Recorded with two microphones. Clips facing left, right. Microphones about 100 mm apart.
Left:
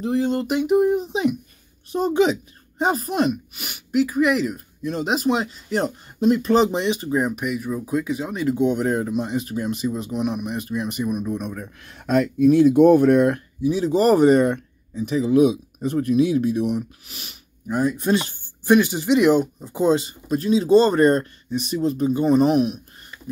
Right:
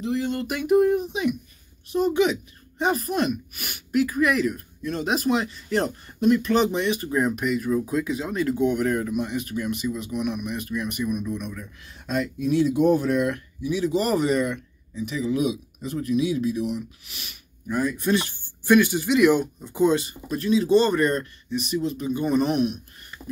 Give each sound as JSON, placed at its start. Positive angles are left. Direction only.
{"t": 0.0, "sound": "speech", "side_deg": 35}
{"t": 1.0, "sound": "speech", "side_deg": 30}
{"t": 5.7, "sound": "speech", "side_deg": 15}
{"t": 6.1, "sound": "speech", "side_deg": 25}
{"t": 11.2, "sound": "speech", "side_deg": 40}
{"t": 11.6, "sound": "speech", "side_deg": 60}
{"t": 13.6, "sound": "speech", "side_deg": 35}